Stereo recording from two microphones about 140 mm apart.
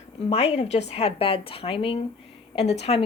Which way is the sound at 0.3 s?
50° left (ahead or behind).